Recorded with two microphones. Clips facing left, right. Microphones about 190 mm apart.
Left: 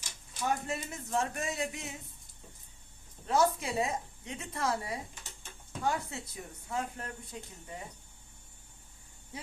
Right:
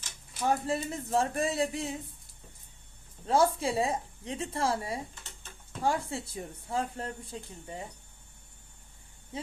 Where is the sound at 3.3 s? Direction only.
30° right (ahead or behind).